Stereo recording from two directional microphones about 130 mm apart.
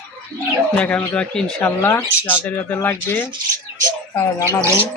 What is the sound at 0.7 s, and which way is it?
Speech, 10° left (ahead or behind).